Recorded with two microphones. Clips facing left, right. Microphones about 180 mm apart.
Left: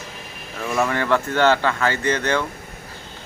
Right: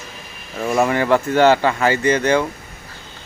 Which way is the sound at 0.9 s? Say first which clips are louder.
Right 4 dB; 10° right (ahead or behind).